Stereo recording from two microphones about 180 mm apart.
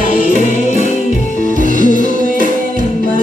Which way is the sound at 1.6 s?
45° right (ahead or behind).